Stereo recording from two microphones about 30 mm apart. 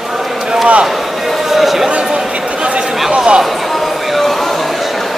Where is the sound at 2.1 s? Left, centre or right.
Right.